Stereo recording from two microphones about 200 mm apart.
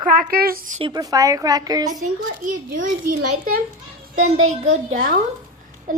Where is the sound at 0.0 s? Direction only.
45° right (ahead or behind).